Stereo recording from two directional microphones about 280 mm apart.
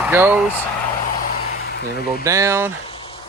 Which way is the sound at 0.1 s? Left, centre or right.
Centre.